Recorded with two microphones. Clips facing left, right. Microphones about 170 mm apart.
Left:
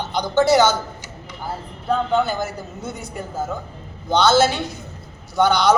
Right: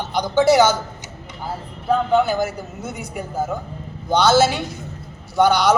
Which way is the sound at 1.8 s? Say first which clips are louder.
Right 2 dB; 5° right (ahead or behind).